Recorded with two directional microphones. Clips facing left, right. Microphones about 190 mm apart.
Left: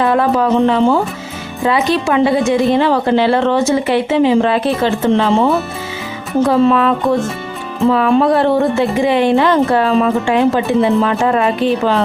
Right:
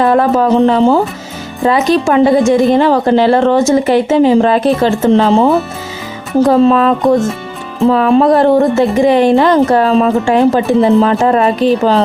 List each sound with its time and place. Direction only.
0.0 s a woman's voice: 40° right (ahead or behind)